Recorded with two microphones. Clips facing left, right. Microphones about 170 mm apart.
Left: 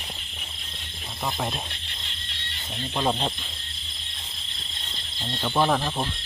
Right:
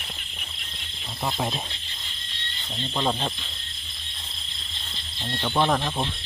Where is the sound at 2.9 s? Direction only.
10° left (ahead or behind).